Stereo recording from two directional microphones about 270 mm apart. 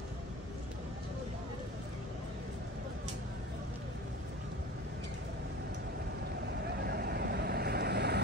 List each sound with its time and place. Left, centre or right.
6.8 s vehicle: right